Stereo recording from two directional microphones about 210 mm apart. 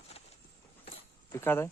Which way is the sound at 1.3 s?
10° left (ahead or behind).